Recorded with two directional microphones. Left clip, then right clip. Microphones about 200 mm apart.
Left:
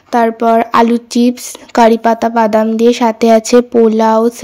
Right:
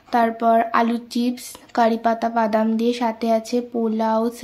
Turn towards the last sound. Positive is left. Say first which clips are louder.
# left 12 dB
turn(degrees=35)  # may be behind; listen again after turning